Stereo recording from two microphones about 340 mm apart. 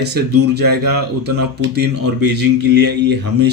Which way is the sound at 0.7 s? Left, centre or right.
Right.